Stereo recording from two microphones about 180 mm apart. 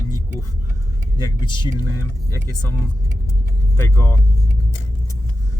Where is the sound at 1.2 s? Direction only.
25° left (ahead or behind).